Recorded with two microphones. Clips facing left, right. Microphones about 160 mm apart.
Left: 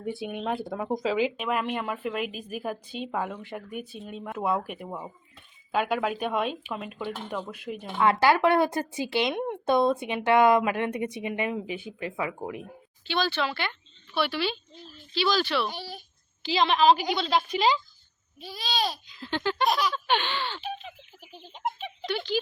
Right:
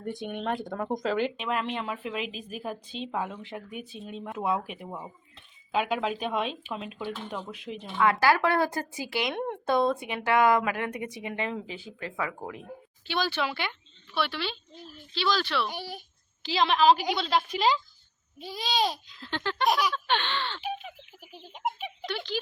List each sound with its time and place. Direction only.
0.0 s speech: 5° left (ahead or behind)
2.2 s a woman's voice: 55° left (ahead or behind)
2.6 s speech: 5° left (ahead or behind)
7.9 s a woman's voice: 25° left (ahead or behind)
13.1 s speech: 10° right (ahead or behind)
14.1 s speech: 5° left (ahead or behind)
15.7 s speech: 15° right (ahead or behind)
16.4 s speech: centre (ahead or behind)
18.3 s a child's voice: 20° right (ahead or behind)
19.0 s speech: 5° left (ahead or behind)
19.6 s speech: 15° right (ahead or behind)
19.9 s a sound: 5° left (ahead or behind)
20.6 s a sound: 10° right (ahead or behind)
22.1 s speech: centre (ahead or behind)